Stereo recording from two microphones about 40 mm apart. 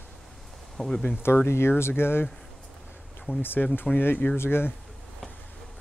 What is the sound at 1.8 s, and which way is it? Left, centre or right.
Speech, left.